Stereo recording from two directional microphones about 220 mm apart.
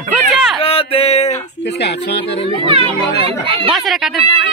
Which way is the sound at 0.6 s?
25° left (ahead or behind).